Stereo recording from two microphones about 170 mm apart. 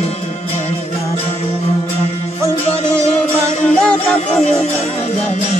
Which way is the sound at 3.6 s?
5° left (ahead or behind).